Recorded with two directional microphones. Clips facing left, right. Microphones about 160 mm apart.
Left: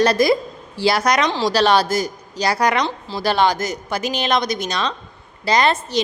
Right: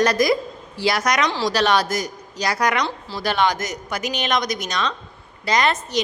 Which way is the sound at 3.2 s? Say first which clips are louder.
Left 3 dB; 30° left (ahead or behind).